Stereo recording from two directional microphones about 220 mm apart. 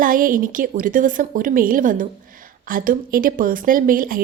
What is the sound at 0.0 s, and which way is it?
A woman's voice, 40° right (ahead or behind).